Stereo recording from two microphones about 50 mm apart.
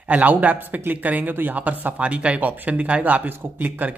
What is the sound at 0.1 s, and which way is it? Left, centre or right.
Speech, right.